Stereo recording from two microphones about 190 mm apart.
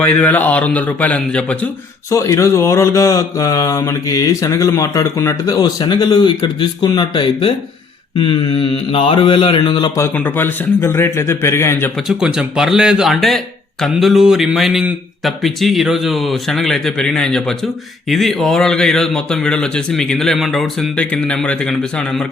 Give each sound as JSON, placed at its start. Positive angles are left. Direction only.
{"t": 0.0, "sound": "a man's voice", "side_deg": 10}
{"t": 8.2, "sound": "mantra", "side_deg": 25}
{"t": 10.2, "sound": "a man's voice", "side_deg": 10}
{"t": 12.0, "sound": "a man's voice", "side_deg": -5}